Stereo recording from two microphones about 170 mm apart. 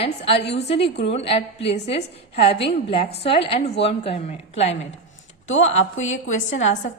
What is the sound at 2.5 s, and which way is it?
Speech, 80° left.